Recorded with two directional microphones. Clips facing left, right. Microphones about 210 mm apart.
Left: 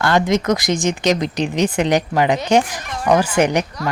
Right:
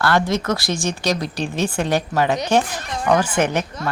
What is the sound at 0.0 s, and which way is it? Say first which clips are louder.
Speech: left 3 dB; 20° left (ahead or behind).